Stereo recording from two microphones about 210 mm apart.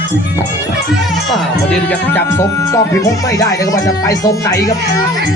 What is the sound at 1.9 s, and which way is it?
Speech, 10° left (ahead or behind).